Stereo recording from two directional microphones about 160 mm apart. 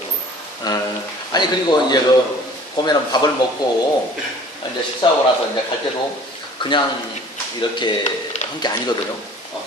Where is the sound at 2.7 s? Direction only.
25° left (ahead or behind).